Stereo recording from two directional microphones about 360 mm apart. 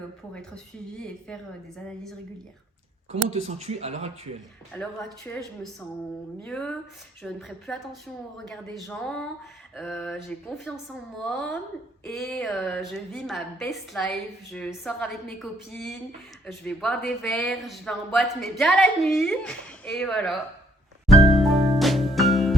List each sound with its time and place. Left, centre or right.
0.3 s speech: centre
3.1 s speech: centre
4.7 s speech: centre
6.4 s speech: centre
21.1 s music: centre